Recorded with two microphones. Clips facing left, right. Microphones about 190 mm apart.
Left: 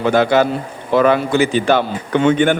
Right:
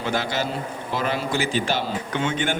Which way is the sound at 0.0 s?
60° left (ahead or behind).